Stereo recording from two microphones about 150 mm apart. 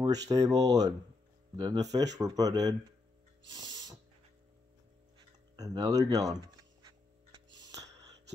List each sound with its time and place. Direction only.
0.0 s speech: 25° right (ahead or behind)
3.5 s music: 25° right (ahead or behind)
5.6 s speech: 25° right (ahead or behind)
7.7 s music: 20° right (ahead or behind)